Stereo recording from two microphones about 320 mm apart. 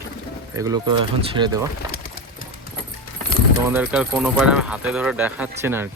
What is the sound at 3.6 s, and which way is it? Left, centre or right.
Speech, centre.